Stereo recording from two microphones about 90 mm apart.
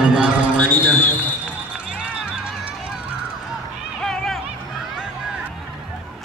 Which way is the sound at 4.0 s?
5° left (ahead or behind).